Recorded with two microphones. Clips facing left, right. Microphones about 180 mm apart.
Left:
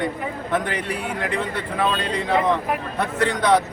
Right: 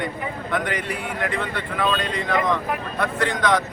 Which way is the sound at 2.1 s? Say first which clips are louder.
Left 2 dB; 30° left (ahead or behind).